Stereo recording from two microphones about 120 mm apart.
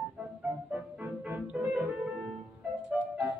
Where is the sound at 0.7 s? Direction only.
10° right (ahead or behind).